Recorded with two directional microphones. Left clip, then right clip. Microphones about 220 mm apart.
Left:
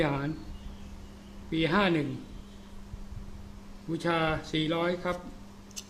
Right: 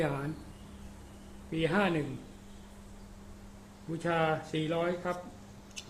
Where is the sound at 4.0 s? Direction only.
15° left (ahead or behind).